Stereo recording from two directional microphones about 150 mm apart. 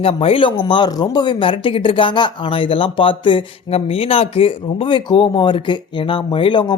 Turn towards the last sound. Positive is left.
turn(degrees=30)  # may be behind; listen again after turning